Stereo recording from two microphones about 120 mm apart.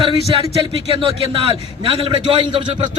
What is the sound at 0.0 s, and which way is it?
A man's voice, 50° right (ahead or behind).